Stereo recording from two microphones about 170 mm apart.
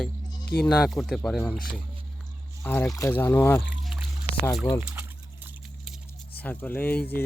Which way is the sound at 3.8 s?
Centre (ahead or behind).